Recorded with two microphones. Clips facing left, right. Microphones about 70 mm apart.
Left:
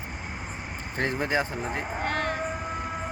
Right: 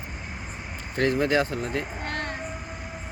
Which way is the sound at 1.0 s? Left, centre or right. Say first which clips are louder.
Right 4 dB; centre.